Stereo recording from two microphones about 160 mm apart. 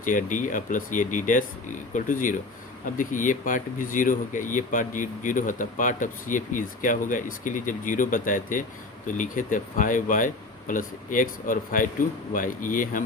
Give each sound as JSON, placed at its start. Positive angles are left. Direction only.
{"t": 0.0, "sound": "speech", "side_deg": 55}